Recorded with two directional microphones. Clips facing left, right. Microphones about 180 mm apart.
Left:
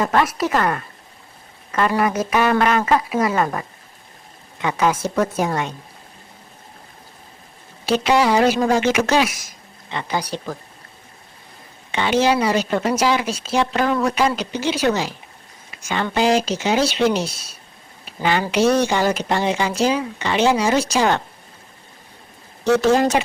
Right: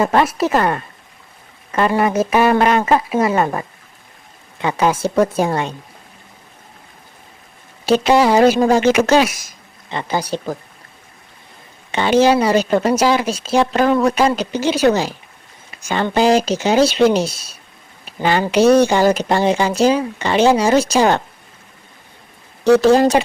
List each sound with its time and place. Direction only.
0.0 s speech: 30° right (ahead or behind)
7.9 s speech: 40° right (ahead or behind)
11.9 s speech: 40° right (ahead or behind)
22.6 s speech: 35° right (ahead or behind)